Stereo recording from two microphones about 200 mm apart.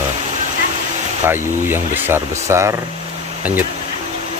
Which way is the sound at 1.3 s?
10° right (ahead or behind).